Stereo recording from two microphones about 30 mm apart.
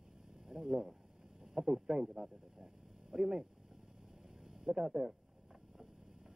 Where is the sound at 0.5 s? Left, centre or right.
Centre.